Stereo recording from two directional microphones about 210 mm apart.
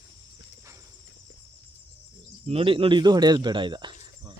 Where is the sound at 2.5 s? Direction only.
25° right (ahead or behind).